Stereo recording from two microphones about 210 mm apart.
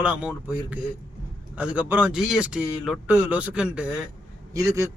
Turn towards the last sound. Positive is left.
turn(degrees=-15)  # may be behind; listen again after turning